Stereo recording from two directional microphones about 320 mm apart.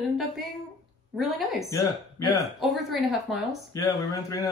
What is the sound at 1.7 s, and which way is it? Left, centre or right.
Speech, centre.